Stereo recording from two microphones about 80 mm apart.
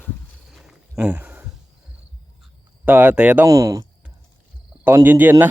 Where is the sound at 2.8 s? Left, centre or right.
Right.